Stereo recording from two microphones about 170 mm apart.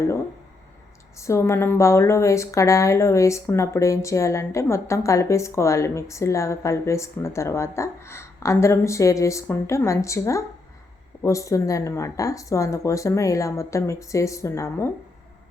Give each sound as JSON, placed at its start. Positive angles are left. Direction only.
{"t": 1.1, "sound": "a woman's voice", "side_deg": 15}